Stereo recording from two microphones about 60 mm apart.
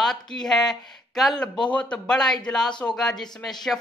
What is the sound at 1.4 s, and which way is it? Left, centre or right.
Speech, left.